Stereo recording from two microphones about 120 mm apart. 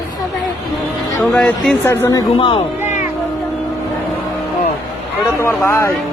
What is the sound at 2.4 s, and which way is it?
Speech, 45° left (ahead or behind).